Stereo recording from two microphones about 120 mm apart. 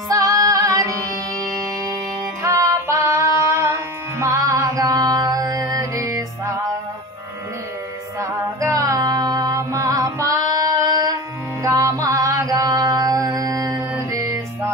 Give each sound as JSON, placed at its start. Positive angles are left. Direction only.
{"t": 0.1, "sound": "music", "side_deg": -30}
{"t": 2.4, "sound": "music", "side_deg": -25}
{"t": 8.2, "sound": "music", "side_deg": -25}
{"t": 11.6, "sound": "mantra", "side_deg": -30}